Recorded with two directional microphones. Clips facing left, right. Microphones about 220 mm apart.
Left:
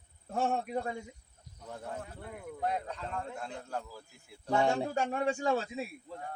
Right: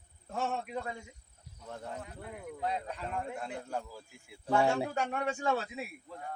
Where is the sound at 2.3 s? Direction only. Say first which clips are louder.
Left 1 dB; centre (ahead or behind).